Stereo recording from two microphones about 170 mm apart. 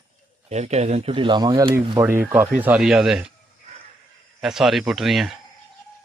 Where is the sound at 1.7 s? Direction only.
15° right (ahead or behind).